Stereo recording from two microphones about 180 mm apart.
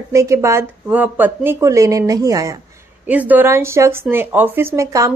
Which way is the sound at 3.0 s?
10° right (ahead or behind).